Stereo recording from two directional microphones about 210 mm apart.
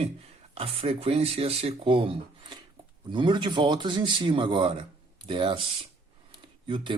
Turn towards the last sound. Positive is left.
turn(degrees=-25)  # may be behind; listen again after turning